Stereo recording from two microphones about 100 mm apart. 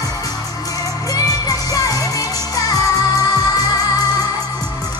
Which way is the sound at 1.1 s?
35° left (ahead or behind).